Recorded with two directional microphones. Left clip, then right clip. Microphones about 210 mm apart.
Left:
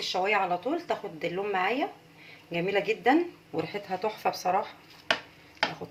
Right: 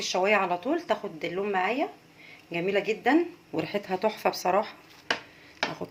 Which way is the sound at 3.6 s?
35° right (ahead or behind).